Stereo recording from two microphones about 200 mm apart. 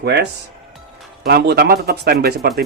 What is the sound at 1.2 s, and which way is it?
Speech, 55° right (ahead or behind).